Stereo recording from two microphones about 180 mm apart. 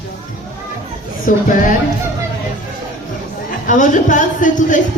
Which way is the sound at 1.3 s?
45° left (ahead or behind).